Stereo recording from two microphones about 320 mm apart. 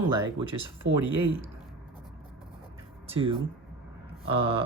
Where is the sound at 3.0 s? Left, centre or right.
Centre.